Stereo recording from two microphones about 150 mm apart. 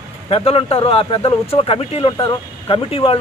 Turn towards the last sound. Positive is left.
turn(degrees=35)  # may be behind; listen again after turning